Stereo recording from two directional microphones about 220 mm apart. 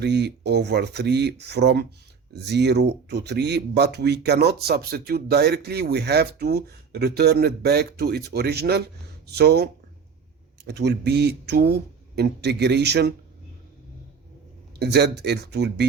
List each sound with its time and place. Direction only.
0.0 s speech: 50° right (ahead or behind)
10.7 s speech: 50° right (ahead or behind)
14.8 s speech: 50° right (ahead or behind)